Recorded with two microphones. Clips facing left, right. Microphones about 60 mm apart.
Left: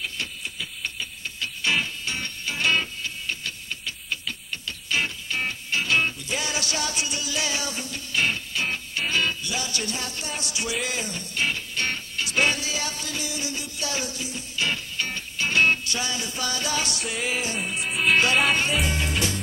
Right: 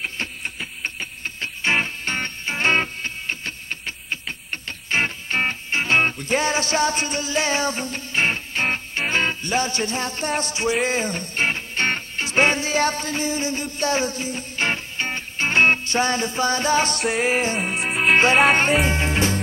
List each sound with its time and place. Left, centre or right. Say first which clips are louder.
0.0 s music: right 4 dB; right
17.0 s music: right 7 dB; right
18.1 s music: right 6 dB; right